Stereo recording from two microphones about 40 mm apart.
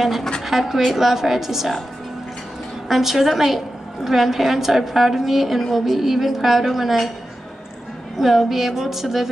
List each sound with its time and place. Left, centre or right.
0.0 s a woman's voice: centre
2.9 s a woman's voice: centre
8.2 s a woman's voice: centre